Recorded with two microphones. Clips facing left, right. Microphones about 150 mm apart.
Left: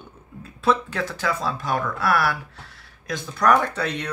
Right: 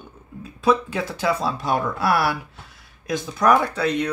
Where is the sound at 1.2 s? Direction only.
20° right (ahead or behind).